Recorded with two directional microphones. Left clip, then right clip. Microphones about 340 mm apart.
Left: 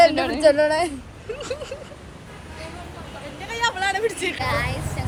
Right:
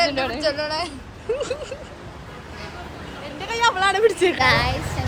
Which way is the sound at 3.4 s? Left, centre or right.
Right.